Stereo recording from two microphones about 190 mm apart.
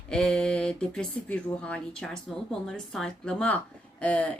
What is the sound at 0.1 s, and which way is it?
Speech, 5° left (ahead or behind).